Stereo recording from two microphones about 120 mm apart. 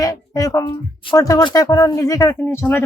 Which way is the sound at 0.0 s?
30° left (ahead or behind).